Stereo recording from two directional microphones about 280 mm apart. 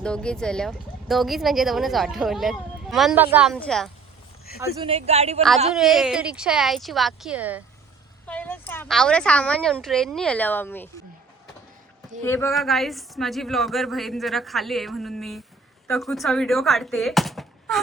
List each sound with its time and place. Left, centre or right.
0.0 s speech: centre
4.8 s a man's voice: right
5.7 s speech: centre
8.3 s speech: centre
12.2 s speech: centre